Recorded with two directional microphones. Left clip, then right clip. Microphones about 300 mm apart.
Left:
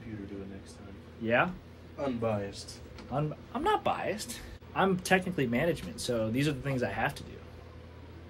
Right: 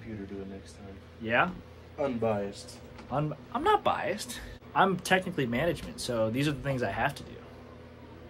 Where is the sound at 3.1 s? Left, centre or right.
Centre.